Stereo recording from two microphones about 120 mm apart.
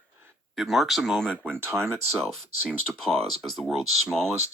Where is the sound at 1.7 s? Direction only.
20° right (ahead or behind).